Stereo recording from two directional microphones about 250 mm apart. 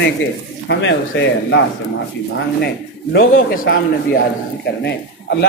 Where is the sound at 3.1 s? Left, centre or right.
Left.